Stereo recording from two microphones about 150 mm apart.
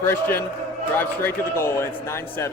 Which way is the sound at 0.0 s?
15° left (ahead or behind).